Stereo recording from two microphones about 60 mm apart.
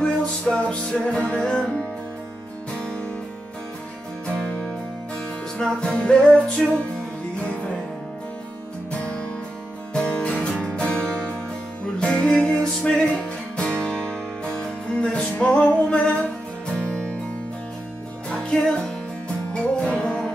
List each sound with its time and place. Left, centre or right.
0.0 s music: centre
4.4 s music: left
9.9 s music: centre
18.3 s music: centre